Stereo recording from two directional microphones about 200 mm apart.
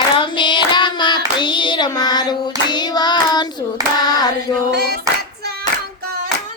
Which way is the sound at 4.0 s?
20° left (ahead or behind).